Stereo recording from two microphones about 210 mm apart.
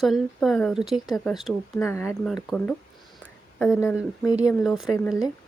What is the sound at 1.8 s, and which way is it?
Speech, 15° left (ahead or behind).